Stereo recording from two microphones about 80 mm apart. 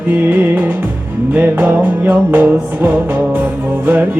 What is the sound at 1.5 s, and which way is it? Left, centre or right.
Music, right.